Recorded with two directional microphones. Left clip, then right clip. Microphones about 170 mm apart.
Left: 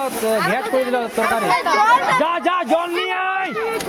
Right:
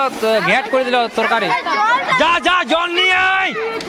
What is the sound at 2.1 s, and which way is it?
A man's voice, 5° left (ahead or behind).